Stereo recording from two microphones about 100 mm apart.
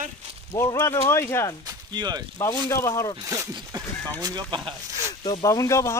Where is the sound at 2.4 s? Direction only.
30° left (ahead or behind).